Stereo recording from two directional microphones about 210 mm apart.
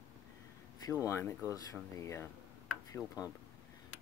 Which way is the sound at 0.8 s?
15° left (ahead or behind).